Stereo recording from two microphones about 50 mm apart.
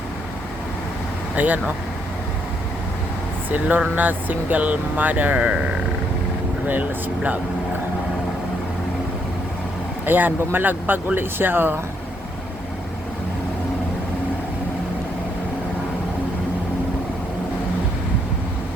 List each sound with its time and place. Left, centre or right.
1.4 s speech: right
3.5 s speech: right
6.7 s speech: right
10.1 s speech: right